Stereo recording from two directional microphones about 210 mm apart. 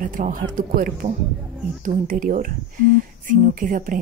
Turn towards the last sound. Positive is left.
turn(degrees=-40)  # may be behind; listen again after turning